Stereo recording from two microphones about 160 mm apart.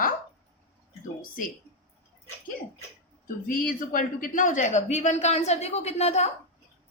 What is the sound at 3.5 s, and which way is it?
Speech, 60° left (ahead or behind).